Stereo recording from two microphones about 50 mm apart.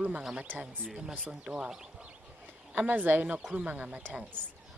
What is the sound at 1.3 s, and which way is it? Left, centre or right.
Speech, centre.